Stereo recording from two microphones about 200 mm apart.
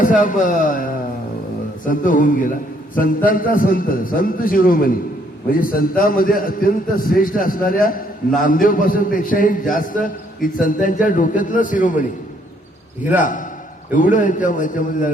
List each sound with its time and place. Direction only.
0.0 s a man's voice: 40° left (ahead or behind)
1.9 s a man's voice: 40° left (ahead or behind)
13.1 s a man's voice: 40° left (ahead or behind)